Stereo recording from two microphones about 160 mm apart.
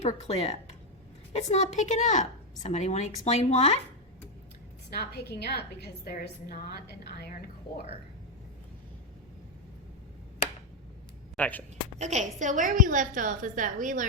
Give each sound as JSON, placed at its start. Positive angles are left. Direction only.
{"t": 0.0, "sound": "a woman's voice", "side_deg": 40}
{"t": 4.9, "sound": "a woman's voice", "side_deg": 90}
{"t": 11.3, "sound": "speech", "side_deg": 10}
{"t": 11.9, "sound": "a woman's voice", "side_deg": -45}